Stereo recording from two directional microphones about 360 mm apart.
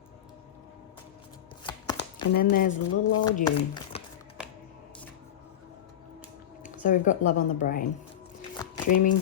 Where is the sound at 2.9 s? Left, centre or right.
Left.